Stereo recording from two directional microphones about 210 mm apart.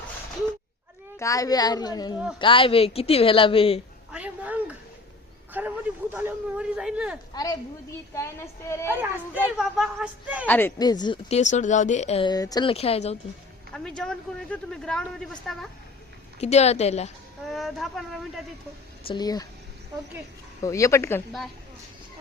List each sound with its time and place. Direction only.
1.2 s a woman's voice: 15° left (ahead or behind)
4.1 s a sound: 5° right (ahead or behind)
5.5 s a man's voice: 10° right (ahead or behind)
7.3 s a woman's voice: 20° left (ahead or behind)
9.6 s a man's voice: centre (ahead or behind)
10.4 s speech: 10° left (ahead or behind); by 13.1 s 30° left (ahead or behind)
13.7 s a man's voice: 5° left (ahead or behind)
16.4 s speech: 30° left (ahead or behind)
17.5 s a man's voice: centre (ahead or behind)
19.0 s speech: 20° left (ahead or behind)
20.6 s a woman's voice: 15° left (ahead or behind)